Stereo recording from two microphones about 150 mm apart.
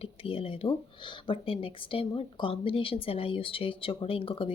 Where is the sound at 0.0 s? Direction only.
40° left (ahead or behind).